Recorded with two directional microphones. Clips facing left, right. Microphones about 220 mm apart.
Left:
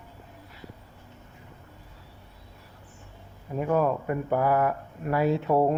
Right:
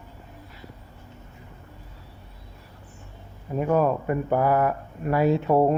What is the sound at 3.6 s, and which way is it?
Speech, 40° right (ahead or behind).